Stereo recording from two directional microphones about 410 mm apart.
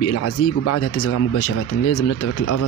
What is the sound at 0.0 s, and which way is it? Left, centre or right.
Speech, left.